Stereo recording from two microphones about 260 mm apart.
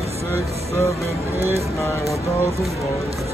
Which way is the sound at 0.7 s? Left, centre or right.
Centre.